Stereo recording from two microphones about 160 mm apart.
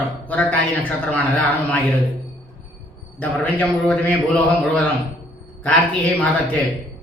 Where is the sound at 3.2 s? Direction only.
10° left (ahead or behind).